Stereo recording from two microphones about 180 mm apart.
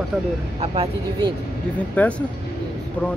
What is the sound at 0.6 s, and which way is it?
Speech, 30° right (ahead or behind).